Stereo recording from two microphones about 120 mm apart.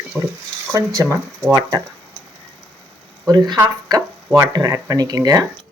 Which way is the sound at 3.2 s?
35° right (ahead or behind).